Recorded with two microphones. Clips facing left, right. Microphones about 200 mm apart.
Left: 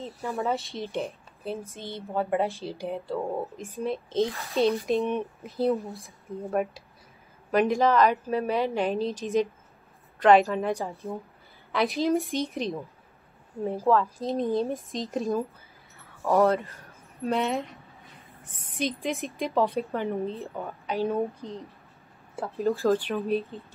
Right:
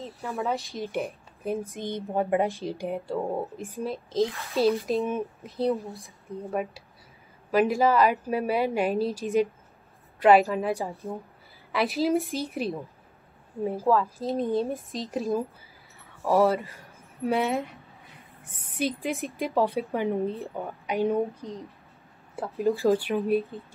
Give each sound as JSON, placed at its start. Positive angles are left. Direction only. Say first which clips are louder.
{"t": 0.0, "sound": "speech", "louder": "left 1 dB", "side_deg": 0}
{"t": 1.0, "sound": "a woman's voice", "louder": "right 2 dB", "side_deg": -15}
{"t": 3.8, "sound": "speech", "louder": "even", "side_deg": 0}
{"t": 14.1, "sound": "speech", "louder": "even", "side_deg": 0}
{"t": 18.1, "sound": "a sound", "louder": "even", "side_deg": -10}
{"t": 18.8, "sound": "speech", "louder": "right 1 dB", "side_deg": -5}
{"t": 19.9, "sound": "speech", "louder": "right 2 dB", "side_deg": -15}
{"t": 21.4, "sound": "speech", "louder": "even", "side_deg": 30}
{"t": 22.6, "sound": "speech", "louder": "right 1 dB", "side_deg": -15}